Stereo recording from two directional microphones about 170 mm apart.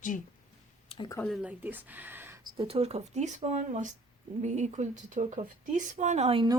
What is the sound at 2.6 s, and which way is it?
Speech, 35° right (ahead or behind).